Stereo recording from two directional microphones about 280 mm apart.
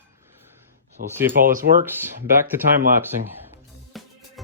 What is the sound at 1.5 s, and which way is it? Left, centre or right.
Speech, right.